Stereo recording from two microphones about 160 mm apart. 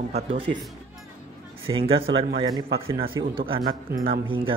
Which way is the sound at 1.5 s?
35° right (ahead or behind).